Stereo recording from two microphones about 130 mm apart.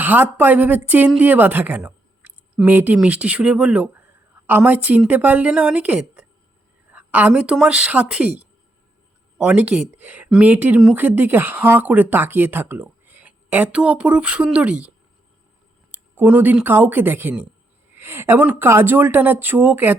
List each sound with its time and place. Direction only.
0.0 s a woman's voice: 15° right (ahead or behind)
9.4 s speech: 10° right (ahead or behind)